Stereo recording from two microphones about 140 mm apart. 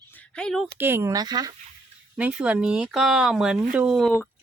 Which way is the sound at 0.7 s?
15° right (ahead or behind).